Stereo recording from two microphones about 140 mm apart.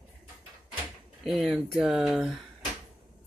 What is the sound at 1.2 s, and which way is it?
Speech, centre (ahead or behind).